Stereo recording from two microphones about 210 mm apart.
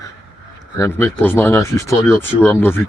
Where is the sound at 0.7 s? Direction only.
15° left (ahead or behind).